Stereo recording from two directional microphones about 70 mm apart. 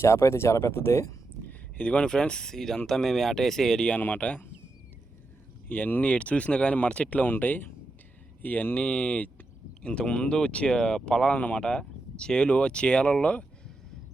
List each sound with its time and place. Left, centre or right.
0.0 s speech: left
1.5 s speech: centre
5.6 s speech: left
11.3 s speech: left